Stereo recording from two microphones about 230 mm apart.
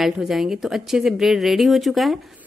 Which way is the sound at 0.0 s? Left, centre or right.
Centre.